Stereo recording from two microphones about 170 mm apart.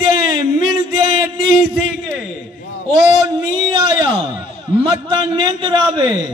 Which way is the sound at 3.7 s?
30° right (ahead or behind).